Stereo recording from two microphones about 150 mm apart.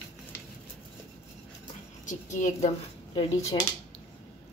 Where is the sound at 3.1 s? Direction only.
45° left (ahead or behind).